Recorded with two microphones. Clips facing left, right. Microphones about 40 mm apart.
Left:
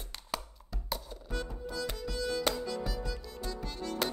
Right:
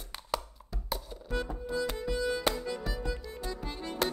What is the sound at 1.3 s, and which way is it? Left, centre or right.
Music, right.